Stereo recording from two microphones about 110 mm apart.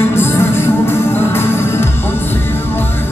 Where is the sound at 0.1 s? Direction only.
20° left (ahead or behind).